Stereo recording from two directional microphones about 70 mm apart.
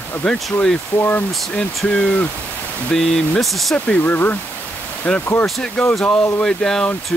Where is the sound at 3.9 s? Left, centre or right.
Left.